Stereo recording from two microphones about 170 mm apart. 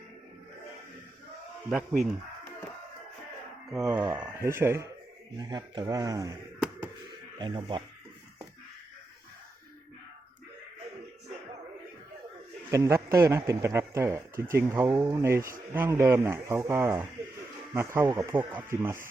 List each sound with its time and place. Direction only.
1.7 s speech: centre (ahead or behind)
3.7 s speech: 5° right (ahead or behind); by 6.3 s 20° right (ahead or behind)
7.3 s speech: 30° right (ahead or behind)
12.7 s speech: 15° right (ahead or behind)